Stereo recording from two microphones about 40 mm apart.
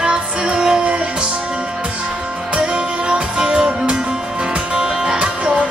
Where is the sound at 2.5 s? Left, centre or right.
Right.